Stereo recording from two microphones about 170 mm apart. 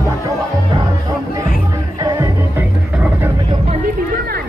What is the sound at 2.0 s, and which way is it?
Music, 20° right (ahead or behind).